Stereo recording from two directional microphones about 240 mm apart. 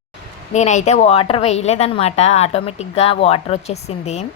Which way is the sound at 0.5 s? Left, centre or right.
Left.